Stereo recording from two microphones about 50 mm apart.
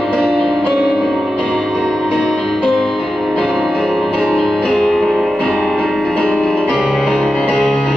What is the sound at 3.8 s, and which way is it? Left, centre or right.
Music, centre.